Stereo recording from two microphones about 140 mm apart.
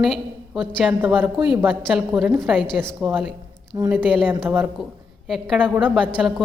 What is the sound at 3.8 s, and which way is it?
Speech, 25° right (ahead or behind).